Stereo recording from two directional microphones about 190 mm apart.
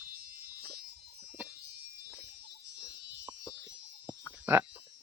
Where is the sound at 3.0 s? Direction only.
70° right (ahead or behind).